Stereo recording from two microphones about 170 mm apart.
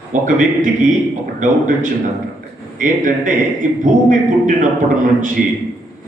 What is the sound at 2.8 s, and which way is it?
A man's voice, 50° right (ahead or behind).